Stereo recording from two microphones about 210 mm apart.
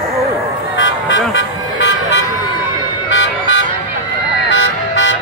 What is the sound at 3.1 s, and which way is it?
Car alarm, 60° left (ahead or behind).